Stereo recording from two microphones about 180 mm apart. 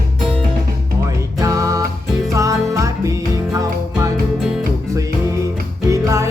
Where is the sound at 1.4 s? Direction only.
20° right (ahead or behind).